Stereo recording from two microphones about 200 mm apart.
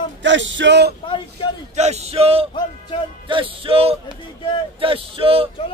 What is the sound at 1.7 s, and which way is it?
Speech, 35° right (ahead or behind).